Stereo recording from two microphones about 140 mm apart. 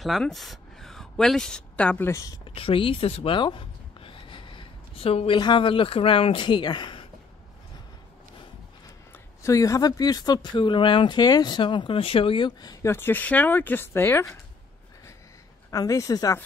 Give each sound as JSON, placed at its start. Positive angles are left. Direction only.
{"t": 0.0, "sound": "speech", "side_deg": 0}
{"t": 2.4, "sound": "speech", "side_deg": 40}
{"t": 9.1, "sound": "speech", "side_deg": 20}
{"t": 12.9, "sound": "speech", "side_deg": 15}
{"t": 15.7, "sound": "speech", "side_deg": 25}